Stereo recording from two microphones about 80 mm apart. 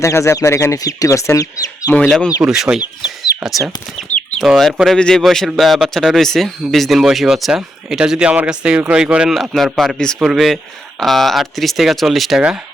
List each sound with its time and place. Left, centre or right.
0.0 s speech: left
2.4 s speech: centre
3.9 s chicken: centre
4.9 s a man's voice: centre
9.3 s speech: centre